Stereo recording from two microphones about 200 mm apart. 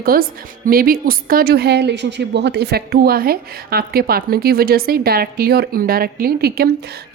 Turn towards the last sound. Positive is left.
turn(degrees=-50)  # may be behind; listen again after turning